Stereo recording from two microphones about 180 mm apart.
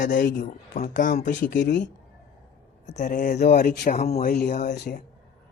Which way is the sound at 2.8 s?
45° left (ahead or behind).